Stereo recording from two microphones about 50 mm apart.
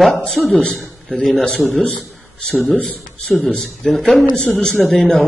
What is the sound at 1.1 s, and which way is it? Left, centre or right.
Speech, centre.